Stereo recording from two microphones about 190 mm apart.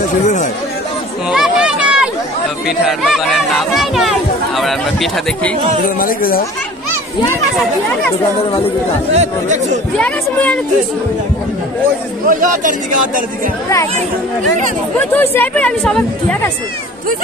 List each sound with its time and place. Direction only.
0.2 s chatter: 40° left (ahead or behind)
1.3 s a sound: 5° right (ahead or behind)
2.8 s speech: centre (ahead or behind)
5.9 s speech: 50° left (ahead or behind)
9.1 s speech: 35° right (ahead or behind)
9.9 s speech: 5° left (ahead or behind)
12.3 s speech: 45° right (ahead or behind)
15.0 s speech: 10° left (ahead or behind)